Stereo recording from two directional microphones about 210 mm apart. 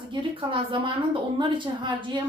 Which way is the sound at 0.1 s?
25° right (ahead or behind).